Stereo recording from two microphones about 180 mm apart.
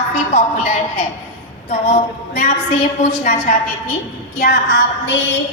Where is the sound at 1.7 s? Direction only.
45° left (ahead or behind).